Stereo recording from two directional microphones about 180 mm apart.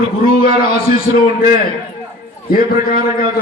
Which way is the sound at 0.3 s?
55° left (ahead or behind).